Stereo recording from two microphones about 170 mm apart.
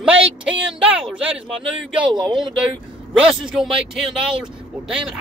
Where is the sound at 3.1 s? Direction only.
5° right (ahead or behind).